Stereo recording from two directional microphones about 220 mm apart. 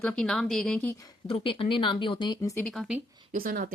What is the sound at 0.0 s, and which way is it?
Speech, 5° left (ahead or behind).